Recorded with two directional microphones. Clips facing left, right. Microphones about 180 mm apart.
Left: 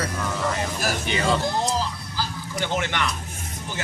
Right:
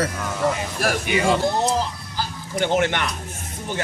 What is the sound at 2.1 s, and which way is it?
Chicken, 50° right (ahead or behind).